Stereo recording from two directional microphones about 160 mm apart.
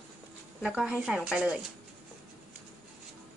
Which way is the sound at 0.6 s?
5° right (ahead or behind).